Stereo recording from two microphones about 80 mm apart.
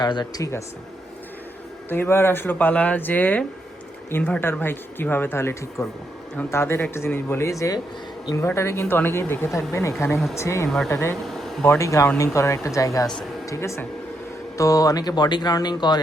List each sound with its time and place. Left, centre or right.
0.0 s speech: left
1.9 s speech: left
11.3 s a sound: centre
11.8 s speech: left